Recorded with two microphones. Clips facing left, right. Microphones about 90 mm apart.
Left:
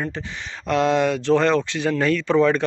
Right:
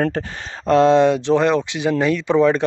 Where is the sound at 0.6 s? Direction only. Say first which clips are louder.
Right 6 dB; 30° right (ahead or behind).